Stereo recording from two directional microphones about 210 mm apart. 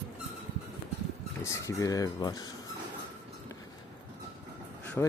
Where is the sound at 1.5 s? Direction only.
15° left (ahead or behind).